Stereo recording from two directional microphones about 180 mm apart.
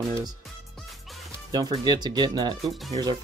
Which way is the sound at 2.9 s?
20° right (ahead or behind).